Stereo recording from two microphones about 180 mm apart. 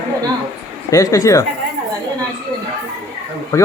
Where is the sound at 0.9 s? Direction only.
20° left (ahead or behind).